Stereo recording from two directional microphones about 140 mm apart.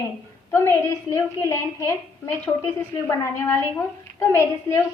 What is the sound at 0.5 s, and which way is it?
A woman's voice, 20° left (ahead or behind).